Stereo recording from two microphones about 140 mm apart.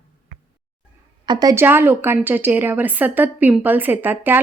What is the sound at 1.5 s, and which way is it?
A woman's voice, 15° right (ahead or behind).